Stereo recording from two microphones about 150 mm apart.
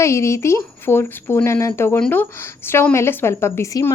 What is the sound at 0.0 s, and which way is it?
Speech, 20° left (ahead or behind).